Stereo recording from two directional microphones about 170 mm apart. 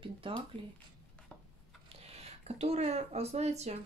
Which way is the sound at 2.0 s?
40° right (ahead or behind).